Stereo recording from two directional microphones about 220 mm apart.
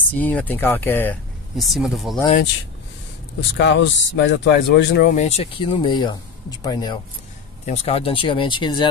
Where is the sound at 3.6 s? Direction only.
55° left (ahead or behind).